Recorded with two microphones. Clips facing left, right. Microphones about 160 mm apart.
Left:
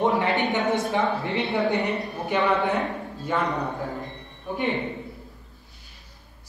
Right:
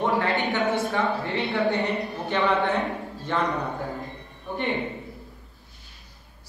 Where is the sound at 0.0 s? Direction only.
20° left (ahead or behind).